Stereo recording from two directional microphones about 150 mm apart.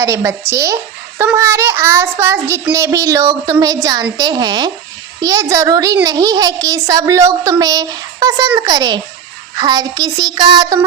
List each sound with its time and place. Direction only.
0.0 s a child's voice: 20° right (ahead or behind)